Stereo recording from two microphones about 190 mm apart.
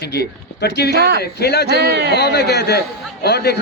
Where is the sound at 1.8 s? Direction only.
60° right (ahead or behind).